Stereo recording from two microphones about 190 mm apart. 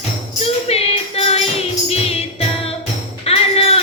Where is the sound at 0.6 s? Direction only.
30° left (ahead or behind).